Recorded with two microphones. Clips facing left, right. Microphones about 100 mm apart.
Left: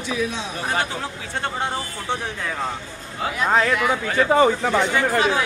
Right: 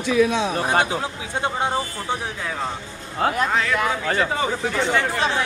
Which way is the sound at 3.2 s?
55° right (ahead or behind).